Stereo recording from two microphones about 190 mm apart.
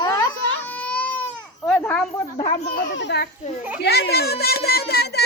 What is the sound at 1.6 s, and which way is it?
Speech, 10° left (ahead or behind).